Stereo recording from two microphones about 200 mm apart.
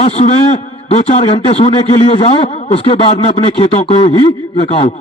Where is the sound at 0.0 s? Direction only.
30° left (ahead or behind).